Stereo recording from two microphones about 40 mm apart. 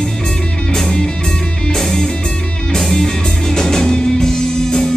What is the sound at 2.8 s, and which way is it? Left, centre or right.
Music, centre.